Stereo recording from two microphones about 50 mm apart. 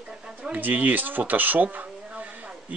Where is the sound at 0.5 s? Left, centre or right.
Right.